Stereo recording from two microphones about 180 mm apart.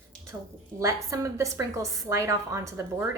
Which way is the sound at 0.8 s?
15° right (ahead or behind).